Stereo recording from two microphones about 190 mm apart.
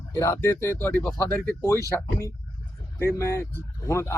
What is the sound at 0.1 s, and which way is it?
Speech, 15° left (ahead or behind).